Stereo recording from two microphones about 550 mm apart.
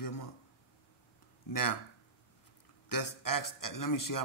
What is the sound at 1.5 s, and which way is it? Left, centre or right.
Speech, left.